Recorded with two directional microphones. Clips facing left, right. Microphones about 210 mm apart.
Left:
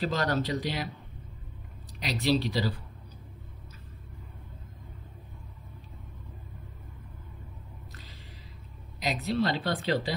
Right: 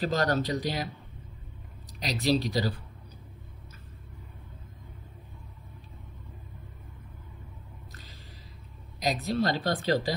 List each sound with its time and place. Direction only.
0.0 s a woman's voice: 45° right (ahead or behind)
1.9 s speech: 40° right (ahead or behind)
9.0 s a woman's voice: 40° right (ahead or behind)